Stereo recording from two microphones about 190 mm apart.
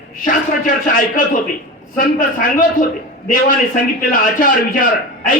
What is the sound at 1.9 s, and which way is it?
A man's voice, 45° left (ahead or behind).